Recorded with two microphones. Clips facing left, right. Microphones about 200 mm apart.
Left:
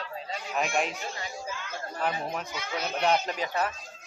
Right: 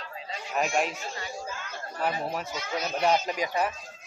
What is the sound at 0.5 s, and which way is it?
Speech, centre (ahead or behind).